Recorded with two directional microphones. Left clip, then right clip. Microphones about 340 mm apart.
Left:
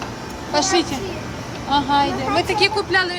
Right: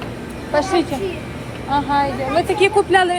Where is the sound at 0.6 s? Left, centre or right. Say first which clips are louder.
Even; left.